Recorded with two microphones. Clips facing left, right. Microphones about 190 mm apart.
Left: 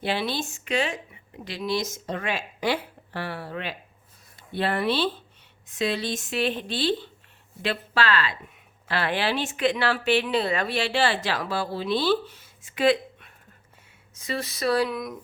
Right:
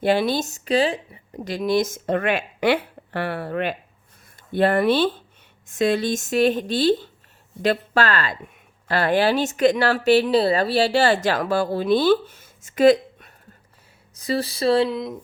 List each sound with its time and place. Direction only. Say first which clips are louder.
0.0 s speech: right 8 dB; 45° right (ahead or behind); by 15.2 s 25° right (ahead or behind)